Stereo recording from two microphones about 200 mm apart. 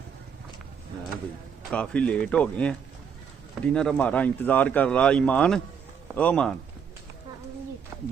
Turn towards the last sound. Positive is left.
turn(degrees=5)  # may be behind; listen again after turning